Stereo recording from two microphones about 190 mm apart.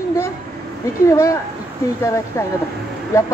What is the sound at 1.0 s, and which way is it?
Speech, 15° left (ahead or behind).